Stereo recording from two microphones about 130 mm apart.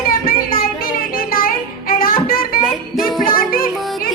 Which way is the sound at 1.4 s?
90° left.